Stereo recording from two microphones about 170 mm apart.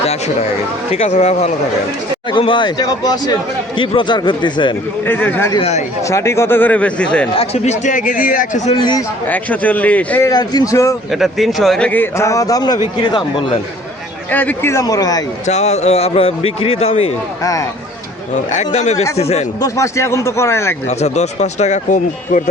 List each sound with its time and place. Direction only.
0.9 s a man's voice: 40° left (ahead or behind)
2.3 s speech: 30° left (ahead or behind)
5.0 s a man's voice: 10° left (ahead or behind)
7.3 s speech: 40° left (ahead or behind)
8.8 s speech: 25° left (ahead or behind)
9.2 s a man's voice: 10° left (ahead or behind)
10.2 s speech: 20° left (ahead or behind)
11.1 s a man's voice: centre (ahead or behind); by 13.6 s 25° left (ahead or behind)
14.3 s a man's voice: 10° left (ahead or behind)
15.4 s a man's voice: 40° left (ahead or behind)
17.4 s speech: 20° left (ahead or behind)
18.5 s a man's voice: 45° left (ahead or behind)
19.6 s a man's voice: 20° left (ahead or behind)
20.8 s speech: 40° left (ahead or behind)